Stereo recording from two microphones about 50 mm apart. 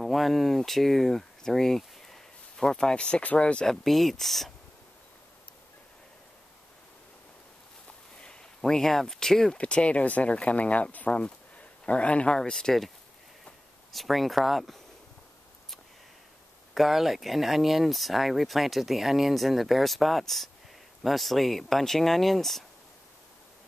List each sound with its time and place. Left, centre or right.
0.0 s speech: centre; by 3.6 s left
3.6 s speech: centre
8.2 s speech: centre
9.6 s speech: left
12.4 s speech: centre
13.9 s speech: centre
16.7 s speech: centre